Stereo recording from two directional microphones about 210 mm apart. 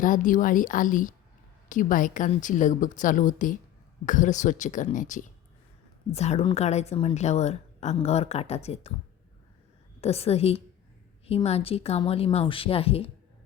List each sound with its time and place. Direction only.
0.0 s a woman's voice: 40° left (ahead or behind)
10.0 s speech: 30° left (ahead or behind)